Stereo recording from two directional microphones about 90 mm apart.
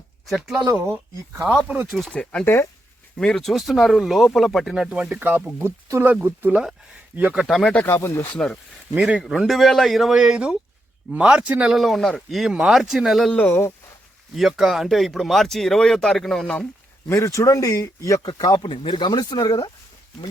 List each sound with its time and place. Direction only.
0.3 s speech: 5° right (ahead or behind)
1.9 s speech: centre (ahead or behind)
2.1 s speech: 10° left (ahead or behind)
4.7 s speech: 10° right (ahead or behind)
7.3 s speech: centre (ahead or behind)
7.9 s speech: 30° left (ahead or behind)
9.0 s speech: 10° right (ahead or behind)
13.3 s speech: 15° left (ahead or behind)
14.3 s speech: 5° right (ahead or behind)
17.1 s speech: 35° left (ahead or behind)
18.6 s speech: 65° left (ahead or behind); by 19.7 s 50° left (ahead or behind)